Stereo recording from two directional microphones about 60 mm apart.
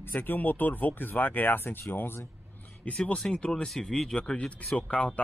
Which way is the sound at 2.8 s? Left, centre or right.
Centre.